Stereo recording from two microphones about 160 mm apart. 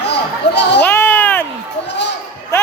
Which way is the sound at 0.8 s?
15° left (ahead or behind).